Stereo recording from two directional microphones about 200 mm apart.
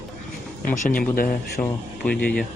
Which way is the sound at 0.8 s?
40° left (ahead or behind).